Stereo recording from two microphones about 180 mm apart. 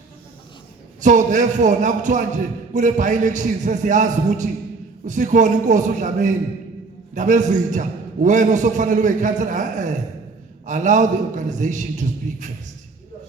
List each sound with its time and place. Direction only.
1.0 s a man's voice: 45° right (ahead or behind)